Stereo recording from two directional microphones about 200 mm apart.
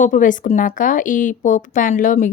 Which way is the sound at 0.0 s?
40° left (ahead or behind).